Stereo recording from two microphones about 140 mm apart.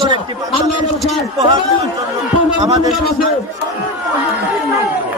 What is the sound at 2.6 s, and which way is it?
Speech, 25° right (ahead or behind).